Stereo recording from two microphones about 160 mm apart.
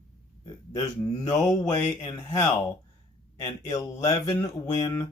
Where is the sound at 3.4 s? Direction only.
40° left (ahead or behind).